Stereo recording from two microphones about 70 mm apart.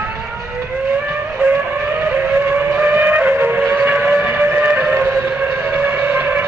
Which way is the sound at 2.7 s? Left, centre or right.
Right.